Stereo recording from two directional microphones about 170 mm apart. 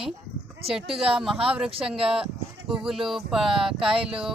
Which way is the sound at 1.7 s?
35° right (ahead or behind).